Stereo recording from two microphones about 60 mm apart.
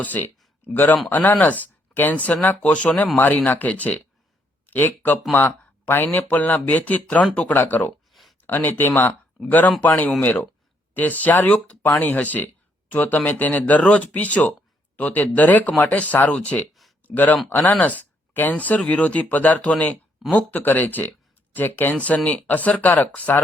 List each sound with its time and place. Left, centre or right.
0.0 s speech: left
8.1 s a sound: centre
8.4 s speech: left